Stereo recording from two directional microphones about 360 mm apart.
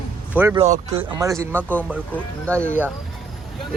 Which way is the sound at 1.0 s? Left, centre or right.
Centre.